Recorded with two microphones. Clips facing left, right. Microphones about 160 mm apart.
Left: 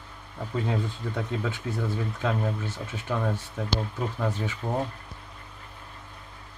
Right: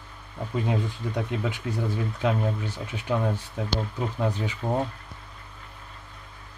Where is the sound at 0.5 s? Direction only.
15° right (ahead or behind).